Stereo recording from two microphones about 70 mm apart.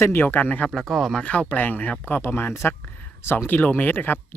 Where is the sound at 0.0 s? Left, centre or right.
Left.